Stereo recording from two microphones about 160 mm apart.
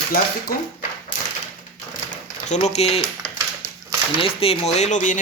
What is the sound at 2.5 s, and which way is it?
Speech, 45° left (ahead or behind).